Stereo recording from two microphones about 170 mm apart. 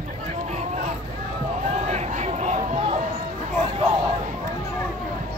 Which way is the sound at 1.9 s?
40° right (ahead or behind).